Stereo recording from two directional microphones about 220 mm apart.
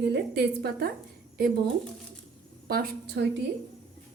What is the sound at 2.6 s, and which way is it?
Speech, 45° right (ahead or behind).